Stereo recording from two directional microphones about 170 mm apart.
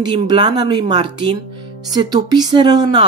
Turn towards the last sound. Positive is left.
turn(degrees=-25)  # may be behind; listen again after turning